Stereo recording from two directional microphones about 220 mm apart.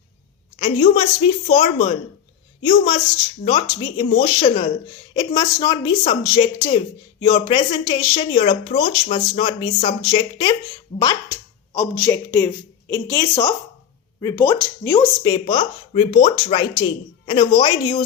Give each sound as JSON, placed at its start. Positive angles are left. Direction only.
{"t": 0.6, "sound": "speech", "side_deg": 25}